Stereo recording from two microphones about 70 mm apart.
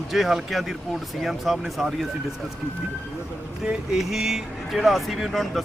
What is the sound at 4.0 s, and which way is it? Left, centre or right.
Speech, centre.